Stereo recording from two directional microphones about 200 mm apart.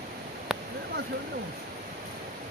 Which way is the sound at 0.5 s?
Centre (ahead or behind).